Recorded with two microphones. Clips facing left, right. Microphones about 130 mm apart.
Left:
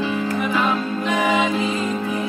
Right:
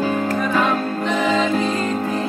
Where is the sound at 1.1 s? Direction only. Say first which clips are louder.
Even; 10° left (ahead or behind).